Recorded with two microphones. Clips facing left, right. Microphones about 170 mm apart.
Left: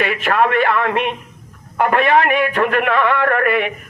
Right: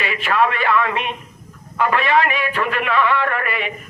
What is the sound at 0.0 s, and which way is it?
Speech, 55° left (ahead or behind).